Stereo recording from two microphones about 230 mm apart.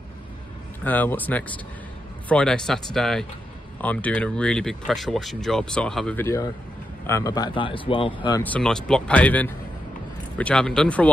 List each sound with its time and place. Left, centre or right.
0.8 s speech: centre
8.4 s speech: centre